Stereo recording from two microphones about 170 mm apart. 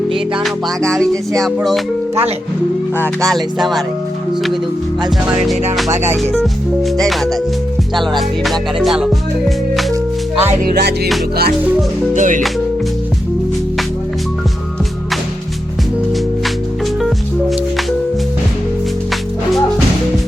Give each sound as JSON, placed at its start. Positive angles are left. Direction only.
{"t": 0.1, "sound": "music", "side_deg": 0}
{"t": 3.0, "sound": "music", "side_deg": 5}
{"t": 6.3, "sound": "music", "side_deg": 0}
{"t": 10.8, "sound": "music", "side_deg": -75}
{"t": 12.1, "sound": "music", "side_deg": -50}